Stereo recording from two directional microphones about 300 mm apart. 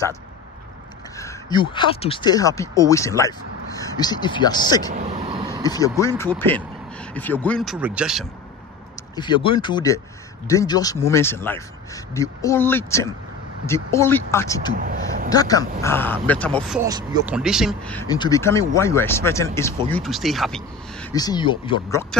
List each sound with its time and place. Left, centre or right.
1.1 s speech: centre
4.9 s vehicle: right
5.6 s speech: centre
9.1 s speech: centre
14.8 s a sound: right
15.2 s speech: centre
16.8 s speech: centre
21.1 s speech: centre